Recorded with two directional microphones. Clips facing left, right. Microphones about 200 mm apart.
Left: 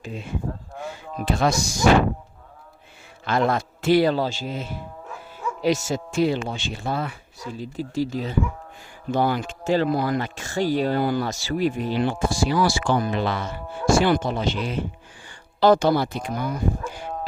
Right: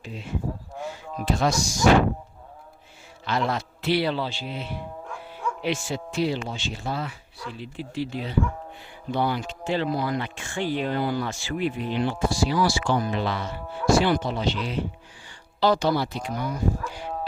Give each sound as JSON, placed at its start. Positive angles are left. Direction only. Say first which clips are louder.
{"t": 0.0, "sound": "speech", "louder": "left 4 dB", "side_deg": 45}
{"t": 1.2, "sound": "speech", "louder": "left 2 dB", "side_deg": 60}
{"t": 3.2, "sound": "speech", "louder": "left 4 dB", "side_deg": 50}
{"t": 5.0, "sound": "music", "louder": "left 2 dB", "side_deg": 5}
{"t": 5.6, "sound": "speech", "louder": "left 7 dB", "side_deg": 40}